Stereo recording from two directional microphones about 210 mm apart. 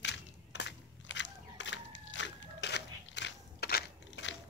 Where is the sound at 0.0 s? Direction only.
55° left (ahead or behind).